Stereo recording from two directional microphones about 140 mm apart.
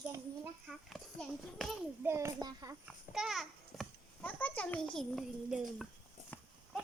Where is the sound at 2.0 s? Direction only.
20° right (ahead or behind).